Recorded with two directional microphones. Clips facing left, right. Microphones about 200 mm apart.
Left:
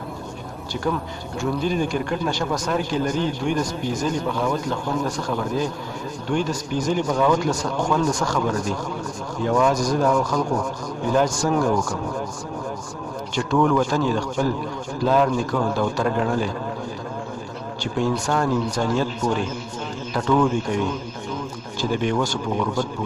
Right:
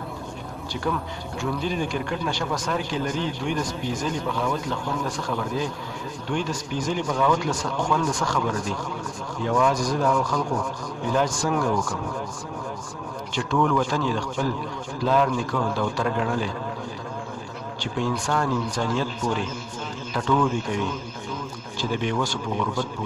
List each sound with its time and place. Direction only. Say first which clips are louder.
1.4 s speech: left 4 dB; 45° left (ahead or behind)
13.3 s speech: left 3 dB; 45° left (ahead or behind)
17.9 s speech: left 3 dB; 45° left (ahead or behind)
21.9 s speech: left 3 dB; 45° left (ahead or behind)